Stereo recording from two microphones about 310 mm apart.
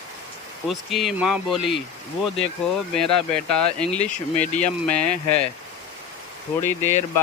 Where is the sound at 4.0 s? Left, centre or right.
Left.